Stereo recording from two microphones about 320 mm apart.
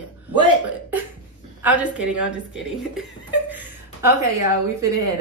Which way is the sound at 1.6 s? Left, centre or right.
Centre.